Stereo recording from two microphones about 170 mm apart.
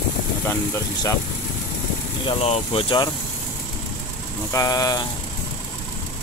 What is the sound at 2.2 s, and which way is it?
Speech, 35° left (ahead or behind).